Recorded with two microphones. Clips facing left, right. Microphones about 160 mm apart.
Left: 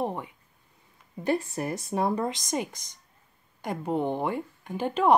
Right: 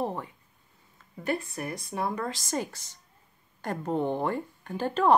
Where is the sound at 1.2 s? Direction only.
25° left (ahead or behind).